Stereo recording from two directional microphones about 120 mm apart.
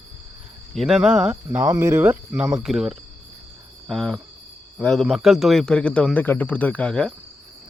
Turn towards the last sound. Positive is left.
turn(degrees=5)  # may be behind; listen again after turning